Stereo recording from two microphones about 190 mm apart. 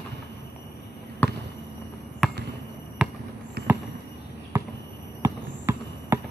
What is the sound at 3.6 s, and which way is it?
Basketball bounce, 60° right (ahead or behind).